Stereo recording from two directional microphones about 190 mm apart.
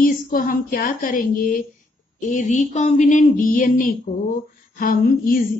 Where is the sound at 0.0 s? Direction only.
50° left (ahead or behind).